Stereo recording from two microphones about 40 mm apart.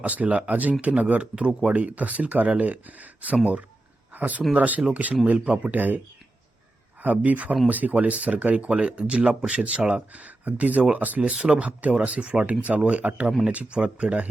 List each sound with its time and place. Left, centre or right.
0.0 s speech: right
5.7 s speech: right
7.0 s speech: right
9.8 s speech: centre
10.2 s speech: right
11.2 s speech: right